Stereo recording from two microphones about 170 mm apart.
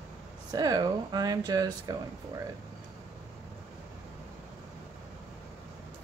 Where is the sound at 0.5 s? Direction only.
20° right (ahead or behind).